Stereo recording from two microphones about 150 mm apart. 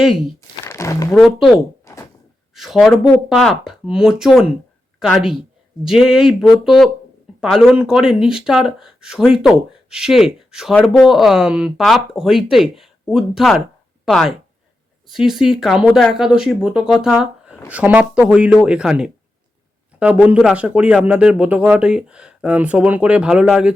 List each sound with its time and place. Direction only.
0.6 s crumpling: 20° left (ahead or behind)
1.2 s speech: centre (ahead or behind)
1.9 s a sound: 20° left (ahead or behind)
2.6 s a woman's voice: centre (ahead or behind)